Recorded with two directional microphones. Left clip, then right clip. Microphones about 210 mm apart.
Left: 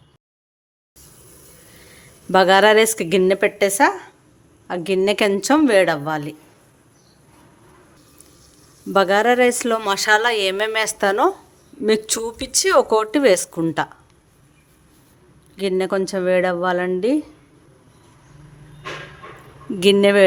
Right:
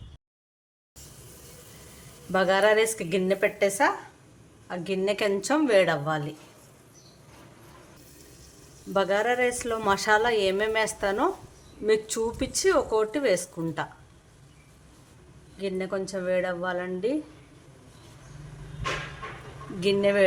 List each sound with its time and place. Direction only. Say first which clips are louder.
2.3 s speech: left 9 dB; 55° left (ahead or behind)
8.9 s speech: left 9 dB; 50° left (ahead or behind)
15.5 s speech: left 10 dB; 50° left (ahead or behind)
19.8 s speech: left 9 dB; 50° left (ahead or behind)